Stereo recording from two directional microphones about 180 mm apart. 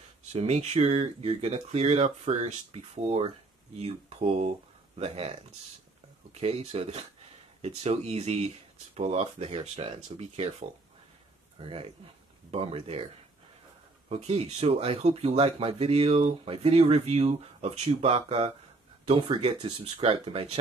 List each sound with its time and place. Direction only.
0.3 s speech: 35° right (ahead or behind)
11.6 s speech: 30° right (ahead or behind)